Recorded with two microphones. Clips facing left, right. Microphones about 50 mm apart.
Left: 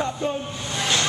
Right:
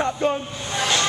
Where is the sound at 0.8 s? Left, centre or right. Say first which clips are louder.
Right 2 dB; centre.